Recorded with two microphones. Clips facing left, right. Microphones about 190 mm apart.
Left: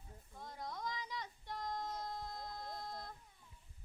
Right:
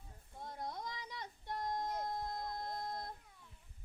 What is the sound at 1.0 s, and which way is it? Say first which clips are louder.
Child singing: even; 55° right (ahead or behind).